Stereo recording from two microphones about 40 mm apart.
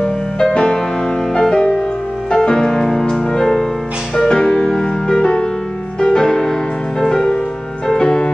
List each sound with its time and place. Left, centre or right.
0.0 s music: left
4.7 s music: centre
5.2 s music: left
7.9 s music: centre